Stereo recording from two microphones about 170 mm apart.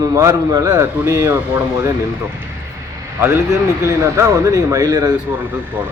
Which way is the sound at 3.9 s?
15° right (ahead or behind).